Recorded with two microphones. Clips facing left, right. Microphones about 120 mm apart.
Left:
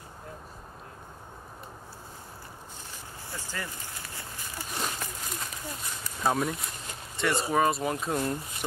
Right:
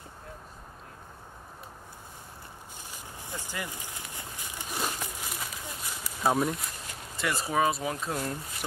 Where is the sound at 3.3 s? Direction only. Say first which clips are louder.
Right 1 dB; 15° right (ahead or behind).